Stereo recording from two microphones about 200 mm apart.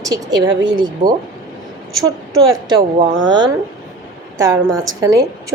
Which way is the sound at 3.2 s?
20° right (ahead or behind).